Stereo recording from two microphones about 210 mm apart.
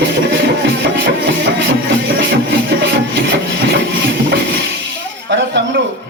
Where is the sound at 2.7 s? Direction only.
55° right (ahead or behind).